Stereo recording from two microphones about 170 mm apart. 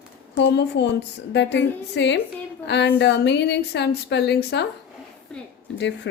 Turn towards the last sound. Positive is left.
turn(degrees=90)